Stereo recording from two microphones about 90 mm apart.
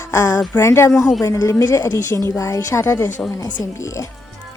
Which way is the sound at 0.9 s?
Centre (ahead or behind).